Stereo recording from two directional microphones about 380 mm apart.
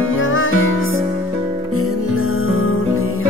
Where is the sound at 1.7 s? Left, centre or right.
Left.